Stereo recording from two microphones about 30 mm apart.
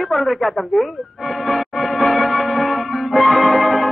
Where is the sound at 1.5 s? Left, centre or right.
Centre.